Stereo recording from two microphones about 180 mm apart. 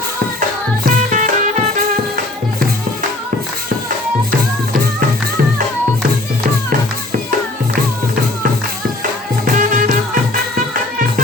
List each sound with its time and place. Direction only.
0.9 s music: 45° right (ahead or behind)
9.6 s music: 50° right (ahead or behind)